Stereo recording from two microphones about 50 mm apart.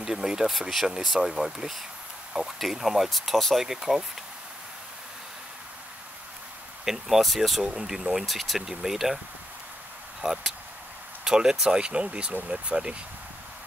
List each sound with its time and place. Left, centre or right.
0.0 s speech: centre
6.8 s speech: centre
10.2 s speech: centre